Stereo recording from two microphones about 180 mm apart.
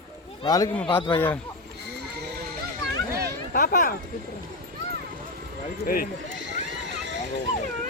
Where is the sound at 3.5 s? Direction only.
50° left (ahead or behind).